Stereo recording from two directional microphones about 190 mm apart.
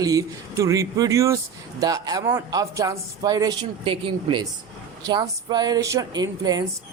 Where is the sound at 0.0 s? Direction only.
20° right (ahead or behind).